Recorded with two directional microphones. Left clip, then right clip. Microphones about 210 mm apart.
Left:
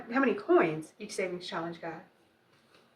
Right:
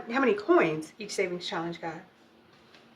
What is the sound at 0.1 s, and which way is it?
Speech, 40° right (ahead or behind).